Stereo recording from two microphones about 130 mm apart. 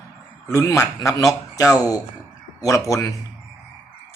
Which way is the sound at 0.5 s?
25° left (ahead or behind).